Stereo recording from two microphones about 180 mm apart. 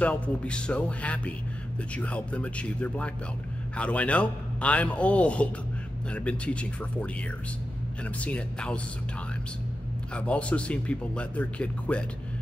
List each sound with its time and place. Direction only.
0.0 s speech: 5° left (ahead or behind)
10.1 s speech: 5° left (ahead or behind)